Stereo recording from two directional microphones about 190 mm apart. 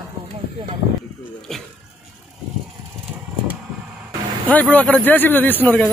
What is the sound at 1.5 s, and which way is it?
Speech, centre (ahead or behind).